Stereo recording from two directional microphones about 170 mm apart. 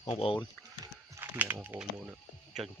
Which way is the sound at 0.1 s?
35° left (ahead or behind).